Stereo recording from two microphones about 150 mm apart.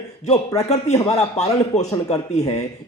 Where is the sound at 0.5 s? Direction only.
45° left (ahead or behind).